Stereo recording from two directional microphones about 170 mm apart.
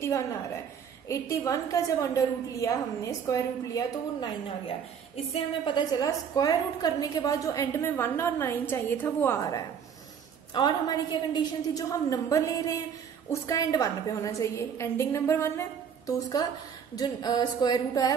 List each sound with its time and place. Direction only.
1.0 s a woman's voice: 20° left (ahead or behind)
5.1 s a woman's voice: 35° left (ahead or behind)
5.9 s a woman's voice: 25° left (ahead or behind)